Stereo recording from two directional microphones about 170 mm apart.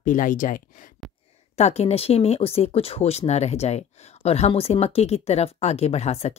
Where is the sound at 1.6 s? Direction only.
40° left (ahead or behind).